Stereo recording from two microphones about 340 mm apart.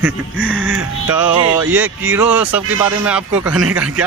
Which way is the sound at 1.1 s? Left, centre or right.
Centre.